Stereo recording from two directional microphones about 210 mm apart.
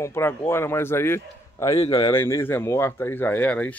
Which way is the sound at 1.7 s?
25° left (ahead or behind).